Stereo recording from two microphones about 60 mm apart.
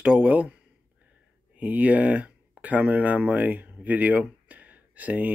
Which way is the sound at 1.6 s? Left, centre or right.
Right.